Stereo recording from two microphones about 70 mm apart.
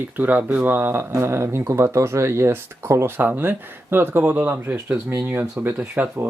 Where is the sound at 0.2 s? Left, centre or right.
Right.